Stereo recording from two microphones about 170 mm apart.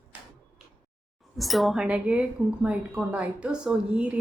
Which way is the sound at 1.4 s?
Centre (ahead or behind).